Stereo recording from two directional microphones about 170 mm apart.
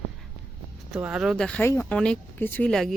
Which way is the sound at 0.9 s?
5° right (ahead or behind).